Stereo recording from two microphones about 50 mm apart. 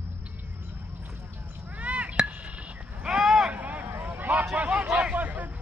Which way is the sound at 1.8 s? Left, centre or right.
Right.